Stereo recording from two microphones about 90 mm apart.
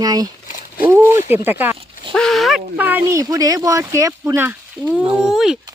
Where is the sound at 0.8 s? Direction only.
25° right (ahead or behind).